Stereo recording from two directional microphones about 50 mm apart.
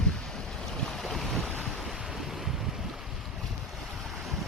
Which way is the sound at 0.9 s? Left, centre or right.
Centre.